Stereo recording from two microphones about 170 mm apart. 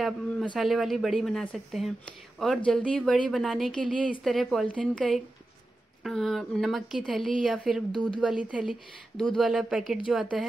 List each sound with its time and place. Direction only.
0.0 s speech: 5° left (ahead or behind)